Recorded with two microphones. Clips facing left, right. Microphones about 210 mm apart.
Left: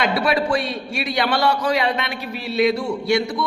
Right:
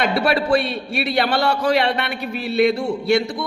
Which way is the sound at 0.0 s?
60° right (ahead or behind).